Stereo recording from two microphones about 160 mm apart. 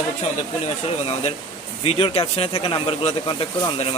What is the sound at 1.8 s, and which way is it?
Speech, 40° left (ahead or behind).